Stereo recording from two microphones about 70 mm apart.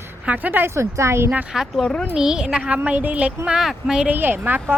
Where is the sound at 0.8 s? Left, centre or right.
Right.